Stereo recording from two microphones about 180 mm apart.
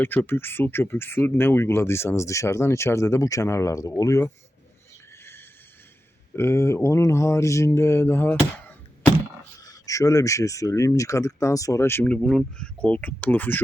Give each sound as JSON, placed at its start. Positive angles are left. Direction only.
{"t": 0.0, "sound": "speech", "side_deg": 10}
{"t": 5.2, "sound": "a sound", "side_deg": 15}
{"t": 6.3, "sound": "speech", "side_deg": 15}
{"t": 9.6, "sound": "speech", "side_deg": 20}